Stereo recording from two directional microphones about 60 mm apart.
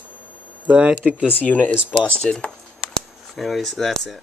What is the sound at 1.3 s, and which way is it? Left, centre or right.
Speech, left.